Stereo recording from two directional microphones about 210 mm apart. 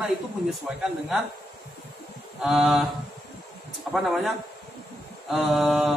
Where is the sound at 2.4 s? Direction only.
5° right (ahead or behind).